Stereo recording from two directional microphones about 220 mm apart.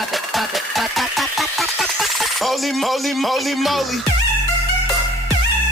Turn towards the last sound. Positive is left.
turn(degrees=0)  # may be behind; listen again after turning